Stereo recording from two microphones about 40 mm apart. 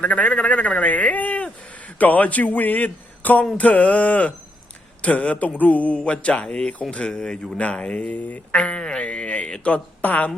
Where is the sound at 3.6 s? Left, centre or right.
Left.